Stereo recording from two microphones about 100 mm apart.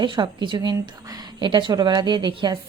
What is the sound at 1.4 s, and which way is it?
A woman's voice, 55° right (ahead or behind).